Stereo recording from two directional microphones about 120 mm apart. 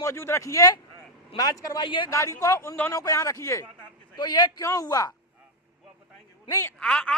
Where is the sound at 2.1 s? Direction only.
25° left (ahead or behind).